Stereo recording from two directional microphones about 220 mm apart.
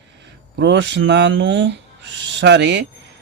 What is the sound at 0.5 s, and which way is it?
Speech, 55° right (ahead or behind).